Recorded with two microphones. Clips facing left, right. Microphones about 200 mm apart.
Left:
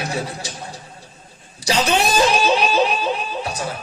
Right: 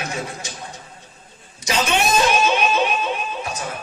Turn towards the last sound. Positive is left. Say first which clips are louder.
# left 2 dB
turn(degrees=35)  # may be behind; listen again after turning